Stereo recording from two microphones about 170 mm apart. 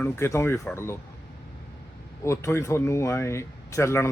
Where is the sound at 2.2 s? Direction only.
15° left (ahead or behind).